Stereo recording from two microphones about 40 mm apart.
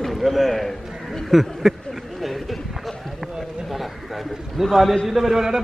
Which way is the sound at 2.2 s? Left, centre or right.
Centre.